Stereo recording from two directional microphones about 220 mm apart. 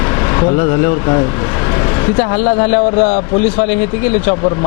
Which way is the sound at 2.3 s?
25° left (ahead or behind).